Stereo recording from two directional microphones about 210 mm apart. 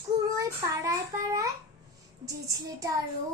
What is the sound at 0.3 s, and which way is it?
A child's voice, 15° right (ahead or behind).